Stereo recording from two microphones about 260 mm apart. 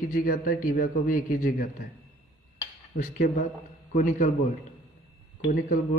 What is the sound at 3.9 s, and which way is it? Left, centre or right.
Speech, left.